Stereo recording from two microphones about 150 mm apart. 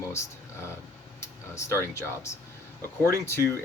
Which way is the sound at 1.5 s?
20° left (ahead or behind).